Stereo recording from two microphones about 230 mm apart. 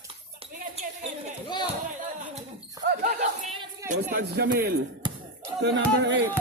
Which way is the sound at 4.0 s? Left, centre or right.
Right.